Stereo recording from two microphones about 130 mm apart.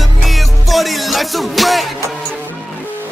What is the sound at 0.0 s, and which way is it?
Music, centre (ahead or behind).